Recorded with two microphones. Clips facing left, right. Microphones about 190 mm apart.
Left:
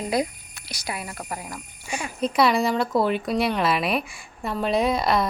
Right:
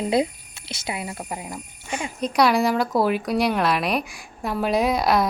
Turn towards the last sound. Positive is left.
turn(degrees=0)  # may be behind; listen again after turning